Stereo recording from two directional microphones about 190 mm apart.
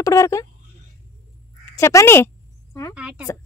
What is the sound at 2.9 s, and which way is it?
Speech, 5° right (ahead or behind).